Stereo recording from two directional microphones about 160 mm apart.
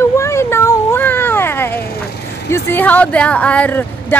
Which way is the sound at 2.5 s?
10° left (ahead or behind).